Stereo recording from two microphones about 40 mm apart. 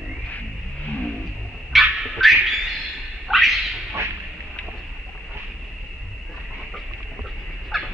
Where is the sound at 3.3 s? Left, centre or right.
Centre.